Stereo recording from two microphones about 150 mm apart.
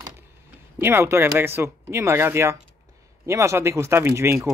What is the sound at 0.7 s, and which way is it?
Speech, 15° right (ahead or behind).